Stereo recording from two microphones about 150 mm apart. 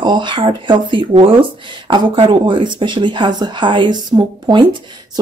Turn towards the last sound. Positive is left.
turn(degrees=-30)  # may be behind; listen again after turning